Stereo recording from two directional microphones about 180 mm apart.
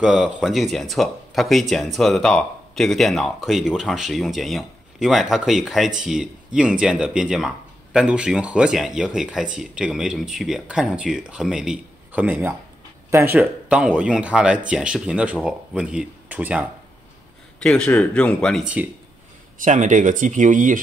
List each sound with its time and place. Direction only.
0.0 s speech: centre (ahead or behind)
17.6 s speech: 5° left (ahead or behind)
19.6 s speech: 45° right (ahead or behind)